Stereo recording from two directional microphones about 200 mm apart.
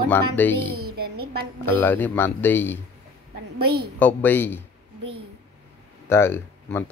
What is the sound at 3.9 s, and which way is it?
Speech, 10° left (ahead or behind).